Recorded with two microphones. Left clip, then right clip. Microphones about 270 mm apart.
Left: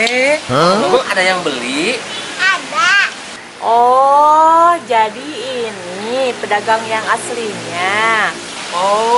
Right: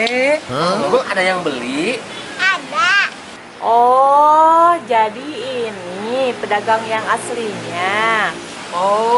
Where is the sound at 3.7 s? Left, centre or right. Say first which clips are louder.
Left 1 dB; right.